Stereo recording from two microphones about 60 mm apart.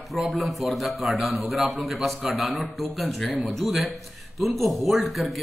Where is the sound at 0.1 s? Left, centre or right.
Centre.